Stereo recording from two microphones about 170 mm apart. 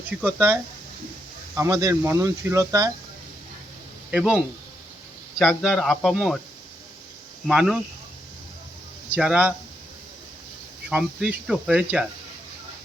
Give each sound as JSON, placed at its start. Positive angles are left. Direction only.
{"t": 0.1, "sound": "speech", "side_deg": -10}
{"t": 1.5, "sound": "speech", "side_deg": -20}
{"t": 4.1, "sound": "speech", "side_deg": -5}
{"t": 5.4, "sound": "speech", "side_deg": 0}
{"t": 7.4, "sound": "speech", "side_deg": -5}
{"t": 9.1, "sound": "speech", "side_deg": -5}
{"t": 10.8, "sound": "speech", "side_deg": -5}